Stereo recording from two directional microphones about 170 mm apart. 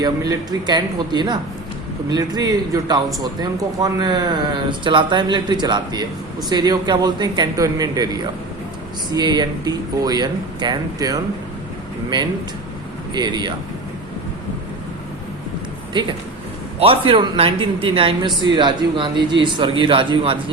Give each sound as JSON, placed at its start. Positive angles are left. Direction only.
{"t": 0.0, "sound": "speech", "side_deg": -25}
{"t": 15.9, "sound": "a man's voice", "side_deg": -25}